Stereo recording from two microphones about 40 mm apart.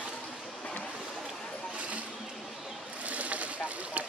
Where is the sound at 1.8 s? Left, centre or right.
Right.